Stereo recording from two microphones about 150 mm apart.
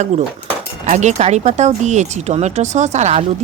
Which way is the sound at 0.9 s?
50° right (ahead or behind).